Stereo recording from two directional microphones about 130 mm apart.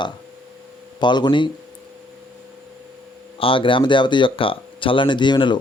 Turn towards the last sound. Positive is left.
turn(degrees=35)  # may be behind; listen again after turning